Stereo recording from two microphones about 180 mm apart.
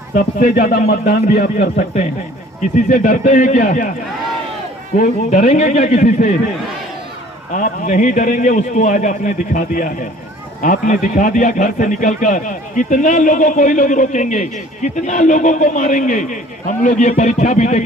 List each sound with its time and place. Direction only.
0.1 s speech: 45° left (ahead or behind)
1.5 s a man's voice: 40° left (ahead or behind)
4.9 s a man's voice: 40° left (ahead or behind)
7.5 s speech: 45° left (ahead or behind)